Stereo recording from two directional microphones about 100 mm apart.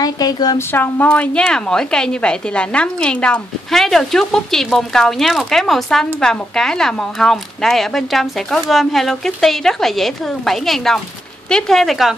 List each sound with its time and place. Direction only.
0.0 s a woman's voice: 40° left (ahead or behind)
0.6 s a woman's voice: 20° left (ahead or behind); by 12.2 s centre (ahead or behind)